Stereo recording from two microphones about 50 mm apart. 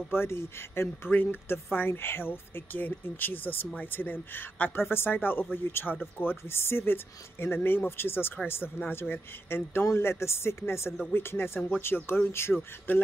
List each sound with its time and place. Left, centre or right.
0.1 s speech: left
1.1 s speech: left
9.8 s speech: left
12.9 s speech: left